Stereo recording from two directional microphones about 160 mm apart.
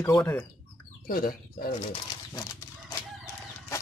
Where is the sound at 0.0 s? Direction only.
15° left (ahead or behind).